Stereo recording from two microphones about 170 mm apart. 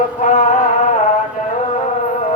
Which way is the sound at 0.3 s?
45° left (ahead or behind).